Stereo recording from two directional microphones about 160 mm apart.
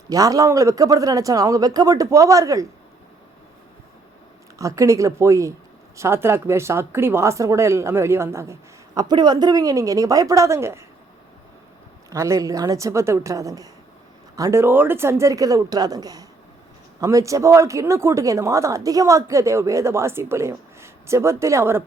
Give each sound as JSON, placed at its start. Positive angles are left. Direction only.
{"t": 0.1, "sound": "speech", "side_deg": -20}
{"t": 4.5, "sound": "a woman's voice", "side_deg": -20}
{"t": 12.1, "sound": "speech", "side_deg": -20}